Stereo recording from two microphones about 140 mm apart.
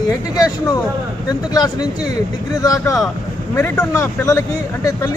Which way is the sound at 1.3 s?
30° left (ahead or behind).